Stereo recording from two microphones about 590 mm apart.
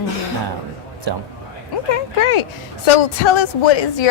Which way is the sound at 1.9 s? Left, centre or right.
Left.